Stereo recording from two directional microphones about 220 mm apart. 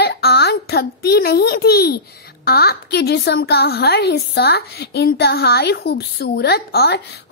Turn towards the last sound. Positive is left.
turn(degrees=45)  # may be behind; listen again after turning